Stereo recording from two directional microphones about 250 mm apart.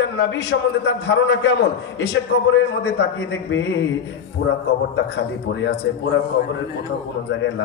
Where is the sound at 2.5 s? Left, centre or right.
Left.